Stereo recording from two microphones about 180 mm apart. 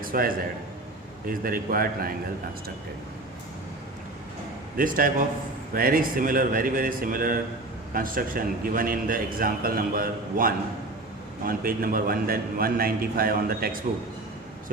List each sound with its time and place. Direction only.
0.0 s a man's voice: 50° right (ahead or behind)
4.8 s a man's voice: 50° right (ahead or behind)